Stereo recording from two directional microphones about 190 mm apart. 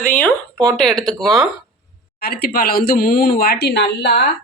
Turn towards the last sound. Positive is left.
turn(degrees=60)  # may be behind; listen again after turning